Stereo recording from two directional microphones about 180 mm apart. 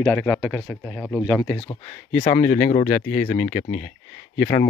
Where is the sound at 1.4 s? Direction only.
20° left (ahead or behind).